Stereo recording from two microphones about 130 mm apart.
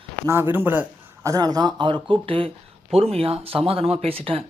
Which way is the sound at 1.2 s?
25° right (ahead or behind).